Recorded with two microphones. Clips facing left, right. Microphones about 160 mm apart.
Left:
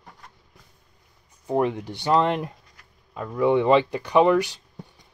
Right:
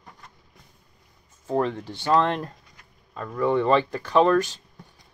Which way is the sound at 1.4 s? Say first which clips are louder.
Left 2 dB; 15° left (ahead or behind).